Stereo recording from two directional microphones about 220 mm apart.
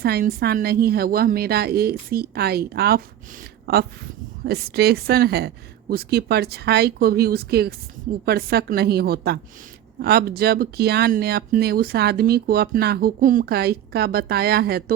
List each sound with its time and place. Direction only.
0.0 s speech: 45° right (ahead or behind)